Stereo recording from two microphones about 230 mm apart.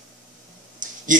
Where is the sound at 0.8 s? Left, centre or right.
Right.